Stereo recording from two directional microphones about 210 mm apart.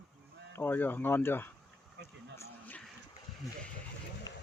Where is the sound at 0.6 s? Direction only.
10° left (ahead or behind).